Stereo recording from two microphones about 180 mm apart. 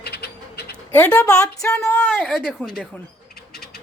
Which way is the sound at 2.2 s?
Centre (ahead or behind).